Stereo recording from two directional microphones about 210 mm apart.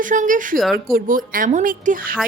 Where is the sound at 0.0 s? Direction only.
40° right (ahead or behind).